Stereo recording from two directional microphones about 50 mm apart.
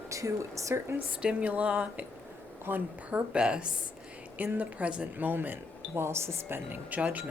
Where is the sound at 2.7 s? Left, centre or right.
Right.